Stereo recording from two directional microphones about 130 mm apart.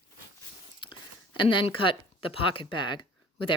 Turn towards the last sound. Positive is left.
turn(degrees=35)  # may be behind; listen again after turning